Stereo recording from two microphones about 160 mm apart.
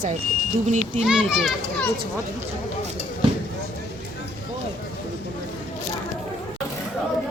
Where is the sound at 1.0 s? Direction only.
5° right (ahead or behind).